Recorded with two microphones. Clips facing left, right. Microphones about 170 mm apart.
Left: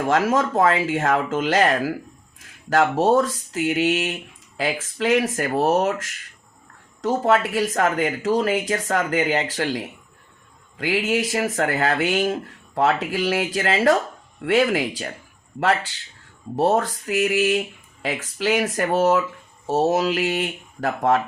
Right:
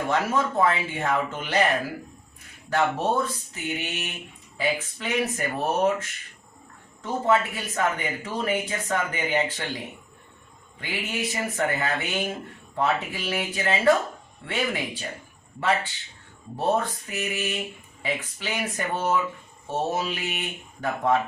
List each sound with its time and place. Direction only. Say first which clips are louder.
0.1 s speech: left 6 dB; 90° left
16.6 s speech: left 5 dB; 90° left